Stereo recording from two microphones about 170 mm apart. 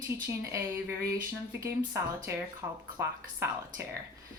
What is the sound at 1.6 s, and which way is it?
A woman's voice, 15° right (ahead or behind).